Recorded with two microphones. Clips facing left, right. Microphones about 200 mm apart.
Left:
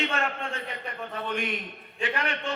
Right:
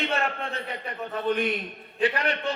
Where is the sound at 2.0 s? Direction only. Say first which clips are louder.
Right 5 dB; 35° right (ahead or behind).